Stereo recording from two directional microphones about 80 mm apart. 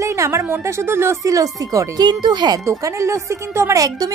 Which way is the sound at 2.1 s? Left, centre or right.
Right.